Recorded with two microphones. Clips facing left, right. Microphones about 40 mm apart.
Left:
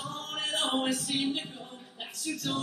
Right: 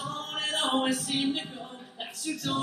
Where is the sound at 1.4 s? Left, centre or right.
Centre.